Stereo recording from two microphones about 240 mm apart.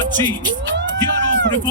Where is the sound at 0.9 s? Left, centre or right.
Right.